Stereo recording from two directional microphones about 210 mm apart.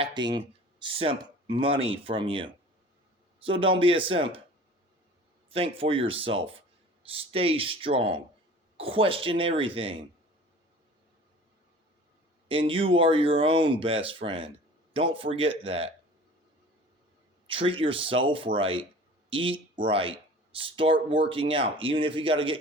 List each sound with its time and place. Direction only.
0.0 s speech: 20° right (ahead or behind)
5.5 s speech: 25° right (ahead or behind)
12.5 s speech: 25° right (ahead or behind)
17.4 s speech: 25° right (ahead or behind)